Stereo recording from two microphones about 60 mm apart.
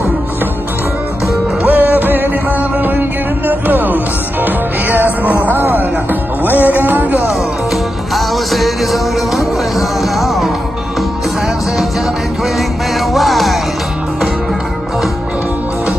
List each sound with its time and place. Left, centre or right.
1.6 s music: right
7.7 s music: centre
13.1 s music: centre